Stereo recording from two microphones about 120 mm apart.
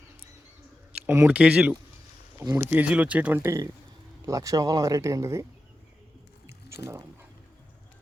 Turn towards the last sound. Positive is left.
turn(degrees=-20)  # may be behind; listen again after turning